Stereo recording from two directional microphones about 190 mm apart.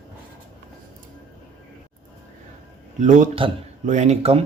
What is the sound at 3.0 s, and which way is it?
Speech, 40° right (ahead or behind).